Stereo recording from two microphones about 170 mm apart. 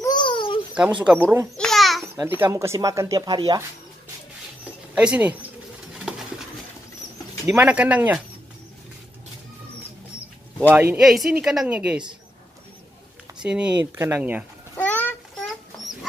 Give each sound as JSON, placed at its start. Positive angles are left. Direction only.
{"t": 0.0, "sound": "a sound", "side_deg": 25}
{"t": 1.1, "sound": "speech", "side_deg": -5}
{"t": 1.6, "sound": "babbling", "side_deg": 0}
{"t": 2.1, "sound": "speech", "side_deg": -10}
{"t": 4.9, "sound": "speech", "side_deg": -10}
{"t": 6.0, "sound": "a sound", "side_deg": -5}
{"t": 7.4, "sound": "speech", "side_deg": -10}
{"t": 10.7, "sound": "speech", "side_deg": -10}
{"t": 13.4, "sound": "speech", "side_deg": -5}
{"t": 14.8, "sound": "a sound", "side_deg": 10}